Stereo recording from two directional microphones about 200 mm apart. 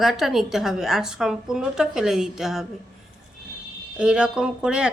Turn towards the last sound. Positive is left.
turn(degrees=-5)  # may be behind; listen again after turning